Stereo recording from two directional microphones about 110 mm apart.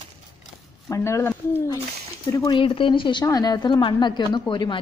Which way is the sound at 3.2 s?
35° left (ahead or behind).